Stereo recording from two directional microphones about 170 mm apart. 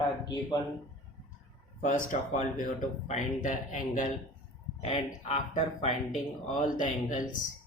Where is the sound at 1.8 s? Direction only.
50° left (ahead or behind).